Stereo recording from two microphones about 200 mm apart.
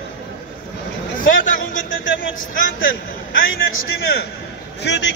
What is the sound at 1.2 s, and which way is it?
Speech, 40° left (ahead or behind).